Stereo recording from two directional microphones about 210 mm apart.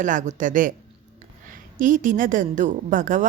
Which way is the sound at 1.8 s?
40° right (ahead or behind).